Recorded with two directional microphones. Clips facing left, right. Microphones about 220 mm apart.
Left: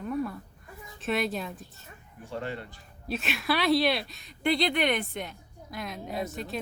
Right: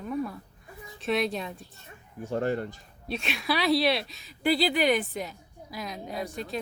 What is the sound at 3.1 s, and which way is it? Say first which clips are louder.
A woman's voice: even; centre (ahead or behind).